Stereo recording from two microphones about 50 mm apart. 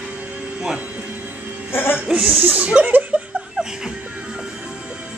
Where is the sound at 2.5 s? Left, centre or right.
Right.